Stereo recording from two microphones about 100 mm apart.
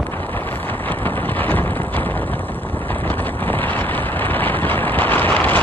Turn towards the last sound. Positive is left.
turn(degrees=15)  # may be behind; listen again after turning